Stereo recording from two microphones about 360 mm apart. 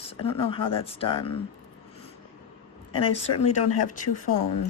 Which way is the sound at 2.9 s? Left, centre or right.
Centre.